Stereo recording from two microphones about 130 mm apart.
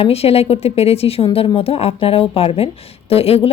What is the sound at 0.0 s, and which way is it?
A woman's voice, 50° left (ahead or behind).